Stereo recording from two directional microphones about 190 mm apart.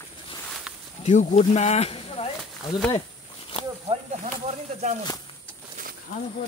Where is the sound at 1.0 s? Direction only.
35° left (ahead or behind).